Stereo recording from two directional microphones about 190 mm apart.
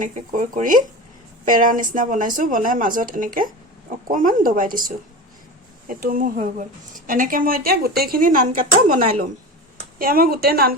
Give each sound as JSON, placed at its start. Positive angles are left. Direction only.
{"t": 0.0, "sound": "speech", "side_deg": -45}